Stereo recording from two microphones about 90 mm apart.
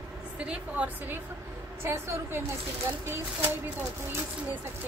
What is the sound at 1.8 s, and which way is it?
Speech, 30° right (ahead or behind).